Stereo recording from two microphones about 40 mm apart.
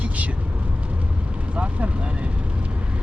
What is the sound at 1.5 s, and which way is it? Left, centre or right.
Speech, right.